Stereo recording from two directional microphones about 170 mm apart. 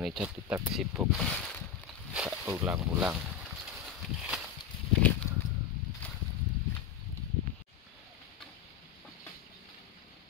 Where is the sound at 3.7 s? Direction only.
5° right (ahead or behind).